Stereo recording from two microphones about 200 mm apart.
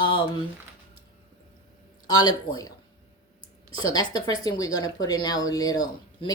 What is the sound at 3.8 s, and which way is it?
Speech, 20° left (ahead or behind).